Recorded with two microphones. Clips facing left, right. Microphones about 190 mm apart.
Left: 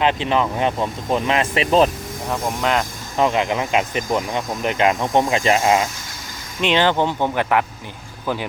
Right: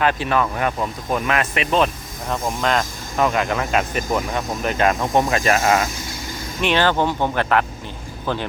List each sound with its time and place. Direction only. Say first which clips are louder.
0.0 s speech: left 1 dB; 20° left (ahead or behind)
2.6 s speech: even; 15° left (ahead or behind)